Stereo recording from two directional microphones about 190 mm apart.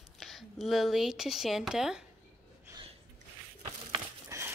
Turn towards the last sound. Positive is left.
turn(degrees=-15)  # may be behind; listen again after turning